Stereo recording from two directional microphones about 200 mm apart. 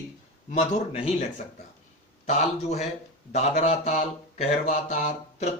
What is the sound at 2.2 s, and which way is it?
Mantra, 35° left (ahead or behind).